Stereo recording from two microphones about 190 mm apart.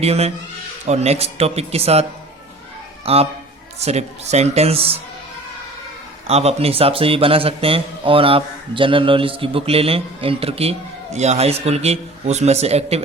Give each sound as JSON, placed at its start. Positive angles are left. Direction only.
{"t": 0.0, "sound": "a man's voice", "side_deg": -35}
{"t": 3.1, "sound": "a man's voice", "side_deg": -30}
{"t": 6.2, "sound": "a man's voice", "side_deg": -35}